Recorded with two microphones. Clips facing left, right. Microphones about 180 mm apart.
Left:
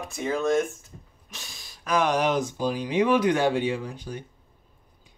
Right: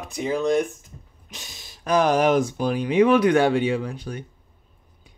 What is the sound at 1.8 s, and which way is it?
Speech, 40° right (ahead or behind).